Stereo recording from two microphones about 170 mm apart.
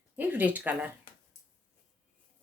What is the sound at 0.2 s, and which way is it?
Speech, 10° right (ahead or behind).